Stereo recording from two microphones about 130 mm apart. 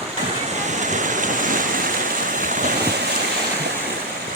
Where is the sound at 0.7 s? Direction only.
65° right (ahead or behind); by 1.9 s 90° right.